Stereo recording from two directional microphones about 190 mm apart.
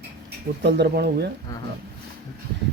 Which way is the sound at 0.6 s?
65° right (ahead or behind).